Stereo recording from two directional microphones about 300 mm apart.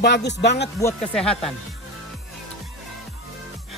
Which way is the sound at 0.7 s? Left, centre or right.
Centre.